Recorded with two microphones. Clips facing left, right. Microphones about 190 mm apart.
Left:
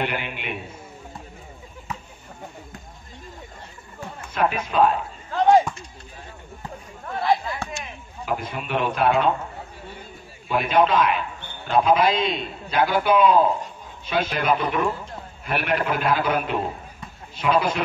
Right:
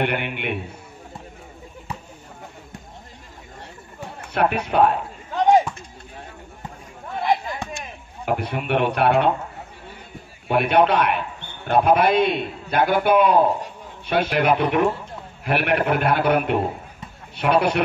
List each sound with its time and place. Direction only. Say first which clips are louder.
0.0 s a man's voice: right 4 dB; 65° right (ahead or behind)
4.2 s a sound: right 2 dB; 65° right (ahead or behind)
4.6 s a man's voice: right 1 dB; 65° right (ahead or behind)
7.2 s chop: even; 20° right (ahead or behind)
8.3 s a man's voice: right 4 dB; 65° right (ahead or behind)
10.5 s a man's voice: right 2 dB; 65° right (ahead or behind)